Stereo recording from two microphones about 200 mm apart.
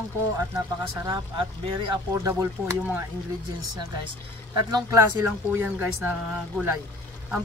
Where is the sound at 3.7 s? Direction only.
20° right (ahead or behind).